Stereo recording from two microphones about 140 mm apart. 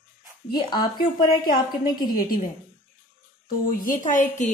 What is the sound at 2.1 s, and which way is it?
Speech, 90° left.